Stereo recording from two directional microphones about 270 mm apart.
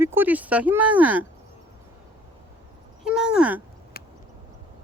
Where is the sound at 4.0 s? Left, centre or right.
Left.